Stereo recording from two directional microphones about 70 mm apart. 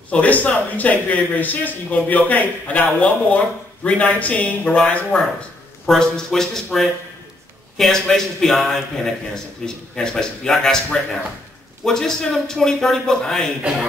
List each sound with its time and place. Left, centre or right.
0.1 s a man's voice: left